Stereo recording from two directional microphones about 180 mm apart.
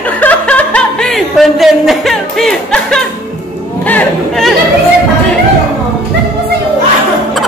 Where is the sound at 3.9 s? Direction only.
5° left (ahead or behind).